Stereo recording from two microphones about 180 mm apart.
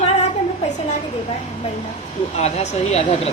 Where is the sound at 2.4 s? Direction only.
35° left (ahead or behind).